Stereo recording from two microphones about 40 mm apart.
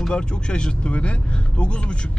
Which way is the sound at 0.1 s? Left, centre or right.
Left.